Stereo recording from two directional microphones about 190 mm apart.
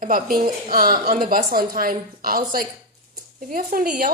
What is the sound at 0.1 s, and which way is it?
A woman's voice, 50° right (ahead or behind).